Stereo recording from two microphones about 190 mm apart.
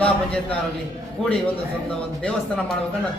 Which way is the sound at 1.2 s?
5° left (ahead or behind).